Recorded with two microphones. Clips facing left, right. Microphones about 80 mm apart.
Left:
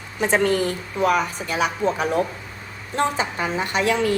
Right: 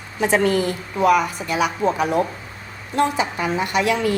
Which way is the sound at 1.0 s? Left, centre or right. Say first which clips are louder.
Right 3 dB; left.